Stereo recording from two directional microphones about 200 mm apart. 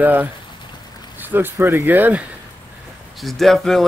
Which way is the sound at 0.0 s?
10° right (ahead or behind).